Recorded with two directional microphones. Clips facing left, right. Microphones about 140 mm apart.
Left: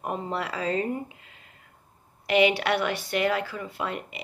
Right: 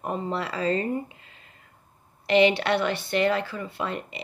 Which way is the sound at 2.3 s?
10° left (ahead or behind).